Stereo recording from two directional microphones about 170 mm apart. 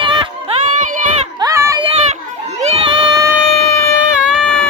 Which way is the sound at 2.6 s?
30° right (ahead or behind).